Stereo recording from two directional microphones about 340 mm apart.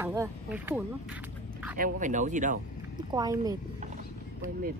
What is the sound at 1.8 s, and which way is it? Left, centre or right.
Speech, right.